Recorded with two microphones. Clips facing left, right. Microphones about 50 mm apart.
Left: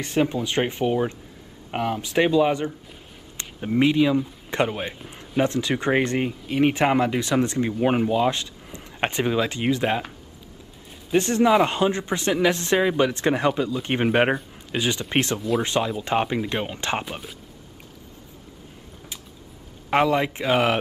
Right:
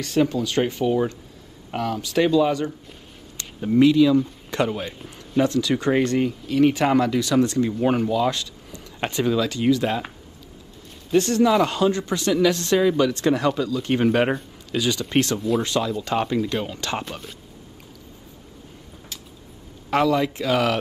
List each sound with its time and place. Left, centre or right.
0.0 s speech: left
4.9 s a man's voice: centre
5.4 s speech: left
11.1 s speech: left
19.9 s speech: left